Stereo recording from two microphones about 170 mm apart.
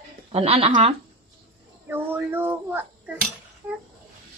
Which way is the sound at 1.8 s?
10° right (ahead or behind).